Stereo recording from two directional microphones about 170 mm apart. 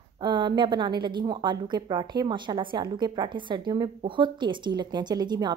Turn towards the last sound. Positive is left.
turn(degrees=-25)  # may be behind; listen again after turning